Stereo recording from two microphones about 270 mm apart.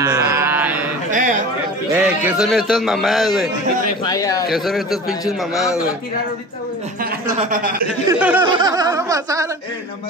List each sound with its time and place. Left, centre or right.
0.0 s mantra: centre
1.1 s a sound: right
2.0 s a man's voice: centre
4.0 s speech: centre
4.5 s a man's voice: centre
7.3 s a man's voice: right
8.1 s speech: centre